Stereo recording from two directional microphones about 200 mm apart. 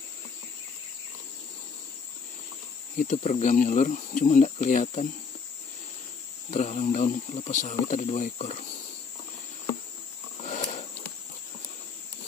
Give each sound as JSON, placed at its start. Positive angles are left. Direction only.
{"t": 3.0, "sound": "speech", "side_deg": 40}
{"t": 6.5, "sound": "speech", "side_deg": 35}
{"t": 10.4, "sound": "a sound", "side_deg": 35}